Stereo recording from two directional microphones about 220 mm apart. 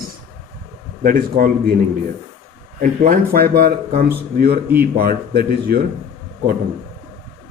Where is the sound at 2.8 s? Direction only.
35° right (ahead or behind).